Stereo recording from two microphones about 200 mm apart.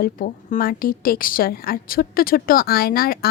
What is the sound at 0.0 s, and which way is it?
A woman's voice, 45° left (ahead or behind).